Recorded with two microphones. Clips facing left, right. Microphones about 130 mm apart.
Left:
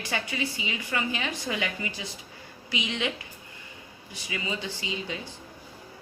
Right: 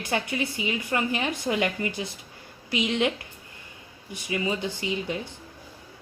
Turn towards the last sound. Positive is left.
turn(degrees=-55)  # may be behind; listen again after turning